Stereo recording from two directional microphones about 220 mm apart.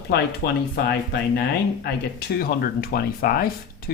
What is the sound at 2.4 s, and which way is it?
Speech, 45° left (ahead or behind).